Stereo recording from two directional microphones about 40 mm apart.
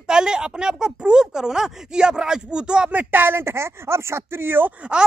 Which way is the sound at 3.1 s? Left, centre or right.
Right.